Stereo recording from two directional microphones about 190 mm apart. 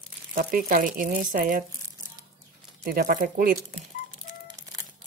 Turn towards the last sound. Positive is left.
turn(degrees=-45)  # may be behind; listen again after turning